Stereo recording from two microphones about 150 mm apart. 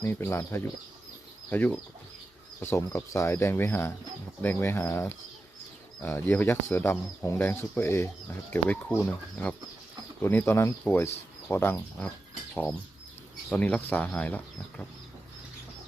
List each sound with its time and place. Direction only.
0.0 s speech: 15° left (ahead or behind)
13.5 s speech: 10° left (ahead or behind)